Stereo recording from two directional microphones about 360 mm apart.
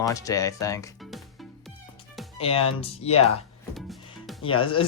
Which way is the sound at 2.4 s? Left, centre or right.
Centre.